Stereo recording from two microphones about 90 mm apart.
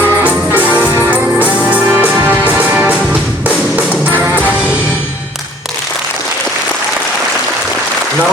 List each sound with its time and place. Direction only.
0.0 s music: 20° right (ahead or behind)